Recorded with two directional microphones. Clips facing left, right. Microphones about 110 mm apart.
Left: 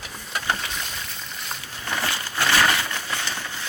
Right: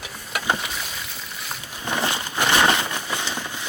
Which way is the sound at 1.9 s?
20° right (ahead or behind).